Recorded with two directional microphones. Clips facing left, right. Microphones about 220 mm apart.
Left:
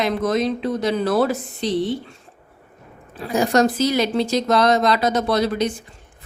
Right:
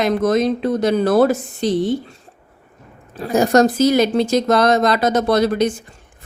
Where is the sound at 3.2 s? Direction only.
45° right (ahead or behind).